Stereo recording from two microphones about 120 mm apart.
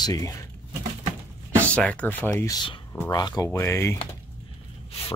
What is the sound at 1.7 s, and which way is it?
Speech, 10° left (ahead or behind).